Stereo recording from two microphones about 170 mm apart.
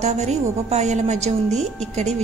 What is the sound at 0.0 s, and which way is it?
A woman's voice, 40° right (ahead or behind).